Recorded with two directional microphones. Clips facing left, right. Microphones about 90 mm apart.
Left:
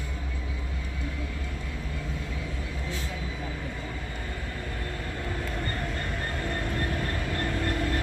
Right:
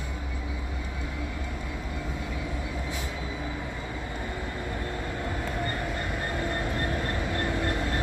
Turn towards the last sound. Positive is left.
turn(degrees=-20)  # may be behind; listen again after turning